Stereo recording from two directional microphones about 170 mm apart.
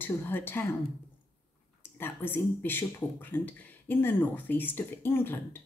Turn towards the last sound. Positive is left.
turn(degrees=15)  # may be behind; listen again after turning